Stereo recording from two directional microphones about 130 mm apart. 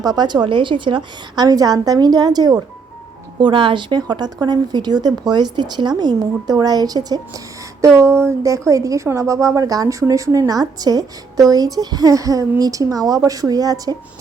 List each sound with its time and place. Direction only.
0.0 s speech: 30° right (ahead or behind)
1.5 s speech: 30° right (ahead or behind)